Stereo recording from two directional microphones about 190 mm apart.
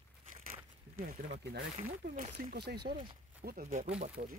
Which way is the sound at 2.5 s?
60° right (ahead or behind).